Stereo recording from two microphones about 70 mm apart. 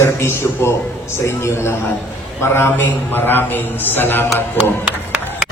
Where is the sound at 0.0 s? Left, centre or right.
Left.